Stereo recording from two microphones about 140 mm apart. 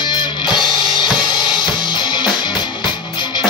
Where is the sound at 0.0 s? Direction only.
35° left (ahead or behind).